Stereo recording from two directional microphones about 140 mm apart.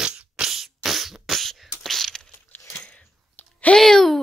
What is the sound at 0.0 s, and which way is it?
Beatboxing, 5° right (ahead or behind).